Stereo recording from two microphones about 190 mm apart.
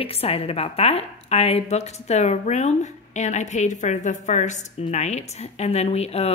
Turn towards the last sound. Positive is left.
turn(degrees=35)  # may be behind; listen again after turning